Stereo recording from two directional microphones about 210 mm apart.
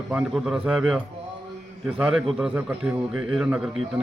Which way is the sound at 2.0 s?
Centre (ahead or behind).